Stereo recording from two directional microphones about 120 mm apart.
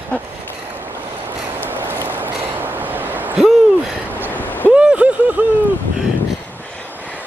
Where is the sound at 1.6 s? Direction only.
15° right (ahead or behind).